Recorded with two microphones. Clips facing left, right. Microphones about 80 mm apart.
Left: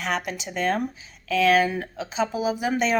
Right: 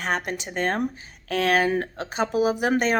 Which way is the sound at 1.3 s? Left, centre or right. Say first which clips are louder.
Left 2 dB; right.